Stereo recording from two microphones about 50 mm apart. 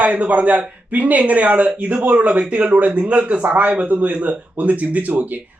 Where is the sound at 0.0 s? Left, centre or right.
Right.